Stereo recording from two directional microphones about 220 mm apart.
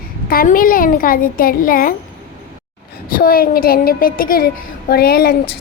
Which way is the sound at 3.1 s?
40° left (ahead or behind).